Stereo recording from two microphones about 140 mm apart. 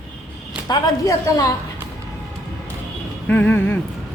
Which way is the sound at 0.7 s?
25° left (ahead or behind).